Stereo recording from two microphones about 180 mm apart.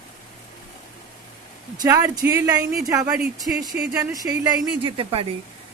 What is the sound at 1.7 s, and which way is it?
Speech, 20° right (ahead or behind).